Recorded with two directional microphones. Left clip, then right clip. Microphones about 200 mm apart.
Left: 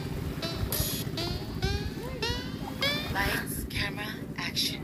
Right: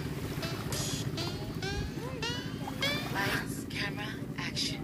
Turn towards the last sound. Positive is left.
turn(degrees=30)  # may be behind; listen again after turning